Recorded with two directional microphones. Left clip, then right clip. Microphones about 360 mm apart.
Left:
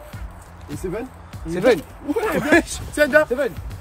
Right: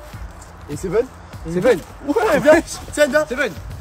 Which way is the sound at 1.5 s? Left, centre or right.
Left.